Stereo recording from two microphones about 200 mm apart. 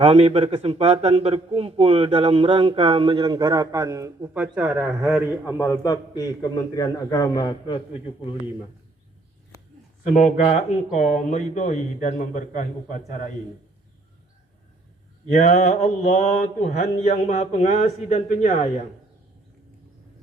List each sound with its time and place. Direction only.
0.0 s a man's voice: 30° right (ahead or behind); by 5.5 s 5° right (ahead or behind)
5.8 s a man's voice: 20° left (ahead or behind)
10.1 s mantra: 35° left (ahead or behind)
15.3 s mantra: 35° left (ahead or behind)